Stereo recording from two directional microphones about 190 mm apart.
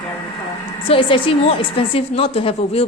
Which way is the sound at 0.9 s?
25° left (ahead or behind).